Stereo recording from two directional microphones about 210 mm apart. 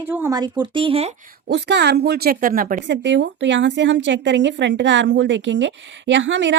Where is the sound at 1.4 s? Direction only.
55° right (ahead or behind).